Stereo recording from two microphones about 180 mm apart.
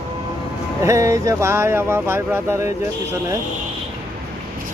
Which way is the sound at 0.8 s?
15° right (ahead or behind).